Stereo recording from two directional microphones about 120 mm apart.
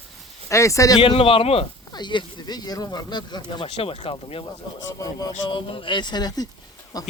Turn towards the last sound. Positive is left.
turn(degrees=30)  # may be behind; listen again after turning